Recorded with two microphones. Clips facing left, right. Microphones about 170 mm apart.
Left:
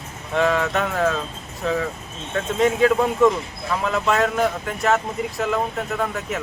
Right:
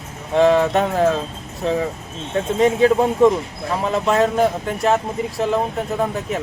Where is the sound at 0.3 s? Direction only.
25° right (ahead or behind).